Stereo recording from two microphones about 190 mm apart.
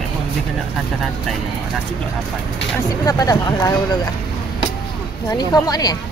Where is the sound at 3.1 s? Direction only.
20° left (ahead or behind).